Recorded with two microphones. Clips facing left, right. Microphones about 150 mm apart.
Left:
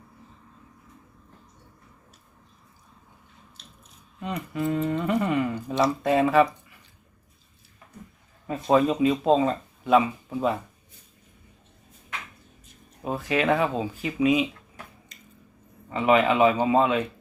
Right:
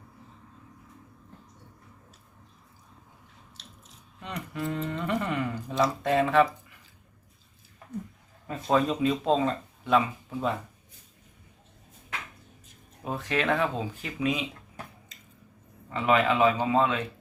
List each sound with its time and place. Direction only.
3.6 s biting: 90° right
4.2 s speech: 5° left (ahead or behind)
8.7 s speech: 10° left (ahead or behind)
13.1 s speech: 10° left (ahead or behind)
15.9 s speech: 15° left (ahead or behind)